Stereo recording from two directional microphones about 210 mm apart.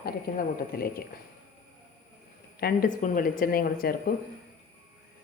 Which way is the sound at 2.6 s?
45° left (ahead or behind).